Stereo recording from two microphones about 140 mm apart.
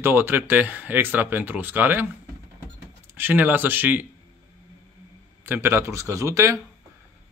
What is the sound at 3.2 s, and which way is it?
Speech, 15° right (ahead or behind).